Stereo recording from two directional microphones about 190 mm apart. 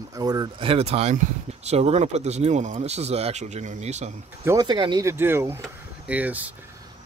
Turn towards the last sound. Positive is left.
turn(degrees=-10)  # may be behind; listen again after turning